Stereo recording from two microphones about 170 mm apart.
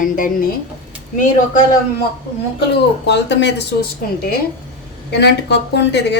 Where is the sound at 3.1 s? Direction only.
90° left; by 4.4 s 65° left (ahead or behind).